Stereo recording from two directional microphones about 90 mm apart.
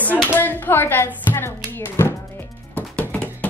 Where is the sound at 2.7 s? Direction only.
15° left (ahead or behind).